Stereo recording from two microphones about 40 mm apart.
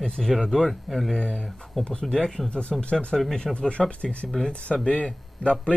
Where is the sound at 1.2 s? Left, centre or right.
Left.